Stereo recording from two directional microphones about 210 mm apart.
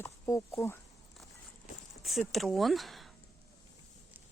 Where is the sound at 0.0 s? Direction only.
15° left (ahead or behind).